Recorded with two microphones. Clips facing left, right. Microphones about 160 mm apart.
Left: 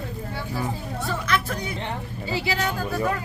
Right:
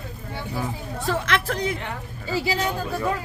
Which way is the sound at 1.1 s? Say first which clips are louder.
Right 2 dB; 90° right.